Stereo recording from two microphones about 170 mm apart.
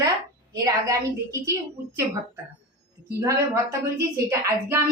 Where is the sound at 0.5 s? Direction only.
20° right (ahead or behind).